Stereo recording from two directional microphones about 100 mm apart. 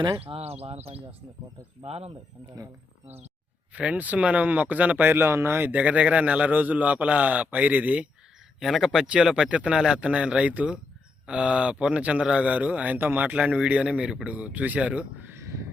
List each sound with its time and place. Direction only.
0.3 s speech: 85° right
3.8 s speech: 15° right (ahead or behind)
8.5 s speech: 5° right (ahead or behind)
15.3 s a sound: 25° right (ahead or behind)